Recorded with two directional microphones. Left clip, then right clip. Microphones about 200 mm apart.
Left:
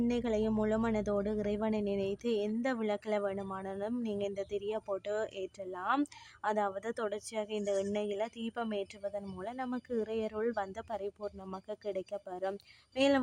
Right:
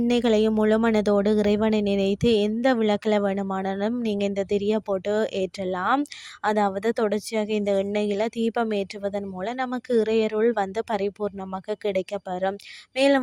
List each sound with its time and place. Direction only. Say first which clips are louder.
0.1 s a woman's voice: right 12 dB; 40° right (ahead or behind)